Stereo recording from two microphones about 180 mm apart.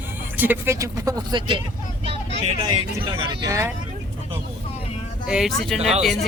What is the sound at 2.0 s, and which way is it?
Vehicle, 35° right (ahead or behind).